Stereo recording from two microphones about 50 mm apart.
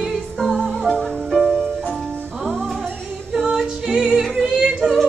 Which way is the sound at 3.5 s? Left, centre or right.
Centre.